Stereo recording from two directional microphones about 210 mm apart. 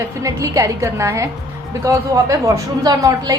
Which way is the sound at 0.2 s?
15° right (ahead or behind).